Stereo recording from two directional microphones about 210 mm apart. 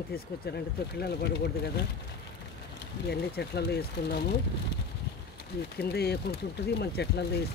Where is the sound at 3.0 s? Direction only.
50° left (ahead or behind).